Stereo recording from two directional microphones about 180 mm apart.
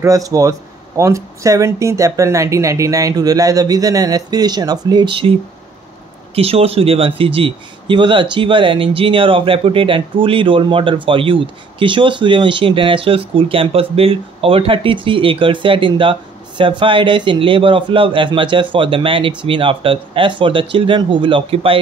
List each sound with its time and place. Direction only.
0.0 s speech: 20° right (ahead or behind)
6.3 s speech: 35° right (ahead or behind)